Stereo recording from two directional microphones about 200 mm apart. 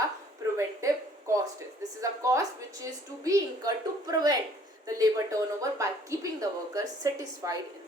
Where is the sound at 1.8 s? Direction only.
15° right (ahead or behind).